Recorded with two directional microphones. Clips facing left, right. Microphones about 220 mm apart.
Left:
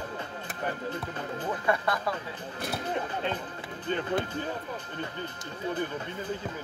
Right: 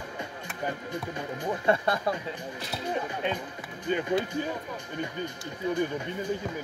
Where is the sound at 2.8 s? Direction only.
10° right (ahead or behind).